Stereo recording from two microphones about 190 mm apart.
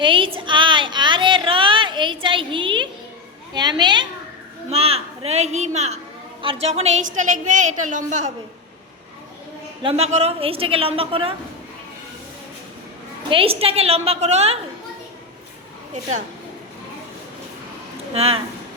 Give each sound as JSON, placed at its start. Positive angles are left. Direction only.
{"t": 0.0, "sound": "a woman's voice", "side_deg": -25}
{"t": 0.3, "sound": "a sound", "side_deg": -25}
{"t": 3.5, "sound": "a woman's voice", "side_deg": -25}
{"t": 9.8, "sound": "a woman's voice", "side_deg": -35}
{"t": 13.3, "sound": "a woman's voice", "side_deg": -30}
{"t": 18.1, "sound": "a woman's voice", "side_deg": -30}